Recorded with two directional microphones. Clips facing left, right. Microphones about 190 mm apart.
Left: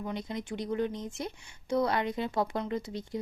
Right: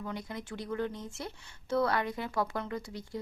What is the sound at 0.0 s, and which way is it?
Speech, 20° left (ahead or behind).